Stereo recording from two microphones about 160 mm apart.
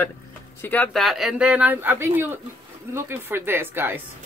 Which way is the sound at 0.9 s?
Centre (ahead or behind).